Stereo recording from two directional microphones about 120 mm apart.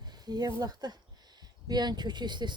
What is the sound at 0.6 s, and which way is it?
Speech, 35° right (ahead or behind).